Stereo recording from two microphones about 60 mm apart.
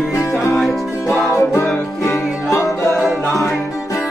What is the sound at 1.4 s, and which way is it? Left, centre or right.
Music, left.